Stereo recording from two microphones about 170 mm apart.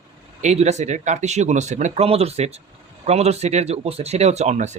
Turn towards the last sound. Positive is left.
turn(degrees=-45)  # may be behind; listen again after turning